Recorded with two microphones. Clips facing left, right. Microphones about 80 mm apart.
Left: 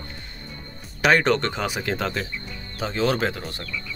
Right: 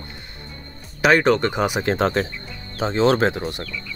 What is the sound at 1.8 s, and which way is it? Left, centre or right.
Speech, right.